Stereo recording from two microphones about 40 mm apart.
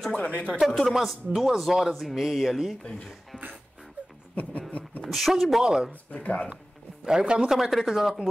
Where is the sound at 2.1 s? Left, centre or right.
Centre.